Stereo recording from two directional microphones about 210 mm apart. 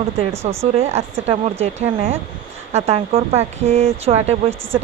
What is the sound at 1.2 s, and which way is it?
Speech, 30° right (ahead or behind).